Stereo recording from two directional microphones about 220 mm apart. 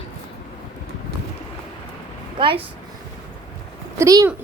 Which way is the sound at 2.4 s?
25° right (ahead or behind).